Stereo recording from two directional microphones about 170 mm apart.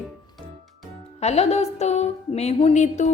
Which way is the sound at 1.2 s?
40° left (ahead or behind).